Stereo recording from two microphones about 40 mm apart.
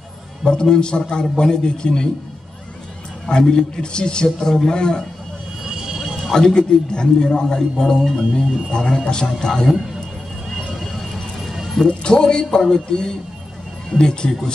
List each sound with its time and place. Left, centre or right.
0.5 s a man's voice: centre
3.3 s a man's voice: centre
5.7 s a sound: centre
6.3 s a man's voice: centre
11.4 s a sound: centre
11.9 s a man's voice: centre